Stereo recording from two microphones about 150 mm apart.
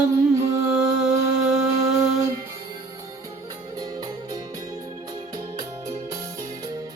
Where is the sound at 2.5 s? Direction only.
20° right (ahead or behind).